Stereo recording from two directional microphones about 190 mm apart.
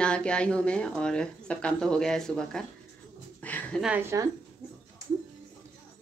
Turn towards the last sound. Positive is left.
turn(degrees=-15)  # may be behind; listen again after turning